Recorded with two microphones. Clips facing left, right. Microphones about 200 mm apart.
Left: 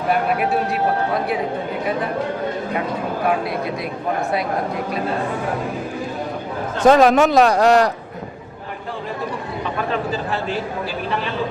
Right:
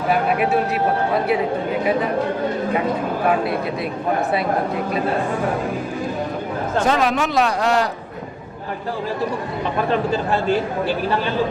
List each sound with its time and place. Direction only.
6.8 s speech: 45° left (ahead or behind)